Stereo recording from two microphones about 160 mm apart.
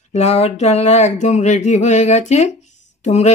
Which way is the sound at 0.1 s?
45° left (ahead or behind).